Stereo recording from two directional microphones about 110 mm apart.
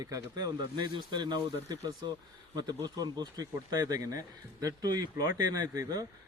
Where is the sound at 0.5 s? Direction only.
45° right (ahead or behind).